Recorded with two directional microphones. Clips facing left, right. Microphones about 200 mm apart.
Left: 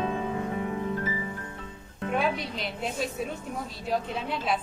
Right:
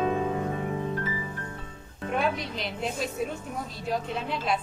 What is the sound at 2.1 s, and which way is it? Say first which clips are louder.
A woman's voice: even; centre (ahead or behind).